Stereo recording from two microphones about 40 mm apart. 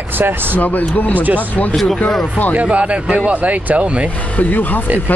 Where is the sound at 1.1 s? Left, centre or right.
Right.